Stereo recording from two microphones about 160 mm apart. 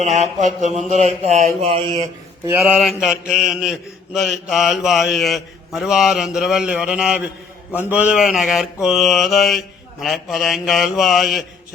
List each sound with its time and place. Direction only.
0.0 s mantra: 45° right (ahead or behind)
2.6 s mantra: centre (ahead or behind)